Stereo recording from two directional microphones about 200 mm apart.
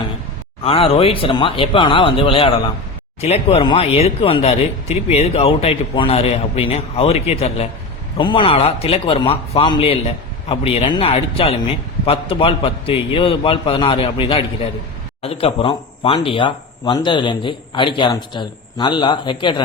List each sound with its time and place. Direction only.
0.6 s speech: 30° left (ahead or behind)